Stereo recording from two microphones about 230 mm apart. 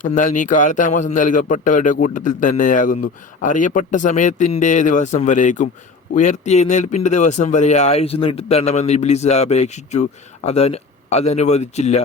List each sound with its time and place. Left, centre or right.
0.0 s a man's voice: left